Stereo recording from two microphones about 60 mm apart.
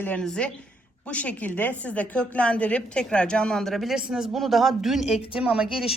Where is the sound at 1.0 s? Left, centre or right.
Left; by 3.9 s centre.